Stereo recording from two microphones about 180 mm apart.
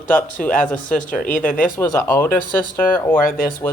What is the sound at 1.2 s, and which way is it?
Speech, 50° left (ahead or behind).